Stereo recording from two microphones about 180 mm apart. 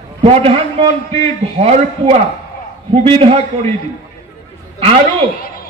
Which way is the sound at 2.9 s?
35° right (ahead or behind).